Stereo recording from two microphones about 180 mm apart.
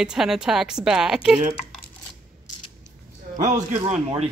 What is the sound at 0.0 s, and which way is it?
Speech, 5° right (ahead or behind).